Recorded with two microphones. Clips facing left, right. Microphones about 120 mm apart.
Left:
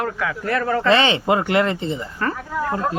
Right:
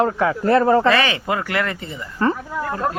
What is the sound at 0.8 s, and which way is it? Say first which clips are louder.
Speech: left 1 dB; 25° left (ahead or behind).